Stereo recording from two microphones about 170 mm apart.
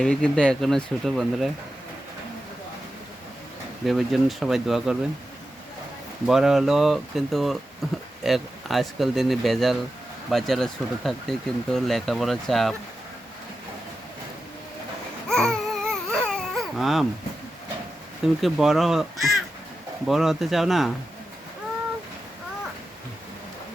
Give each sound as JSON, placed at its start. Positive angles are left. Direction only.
{"t": 0.0, "sound": "speech", "side_deg": 5}
{"t": 3.8, "sound": "speech", "side_deg": 0}
{"t": 6.2, "sound": "speech", "side_deg": 0}
{"t": 15.3, "sound": "babbling", "side_deg": 5}
{"t": 18.4, "sound": "speech", "side_deg": 0}